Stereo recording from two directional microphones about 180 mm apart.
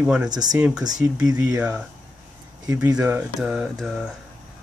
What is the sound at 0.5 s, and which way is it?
Speech, 10° right (ahead or behind).